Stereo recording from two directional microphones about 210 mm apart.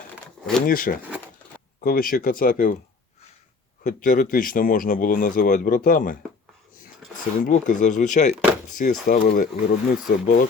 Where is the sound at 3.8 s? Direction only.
40° left (ahead or behind).